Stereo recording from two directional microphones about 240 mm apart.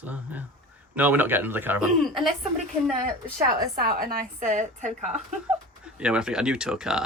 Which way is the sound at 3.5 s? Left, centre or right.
Right.